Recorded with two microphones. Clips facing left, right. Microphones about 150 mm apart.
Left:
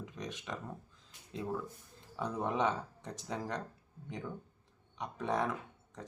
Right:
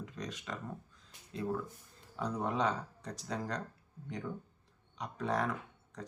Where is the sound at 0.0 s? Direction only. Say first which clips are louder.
Even; 20° left (ahead or behind).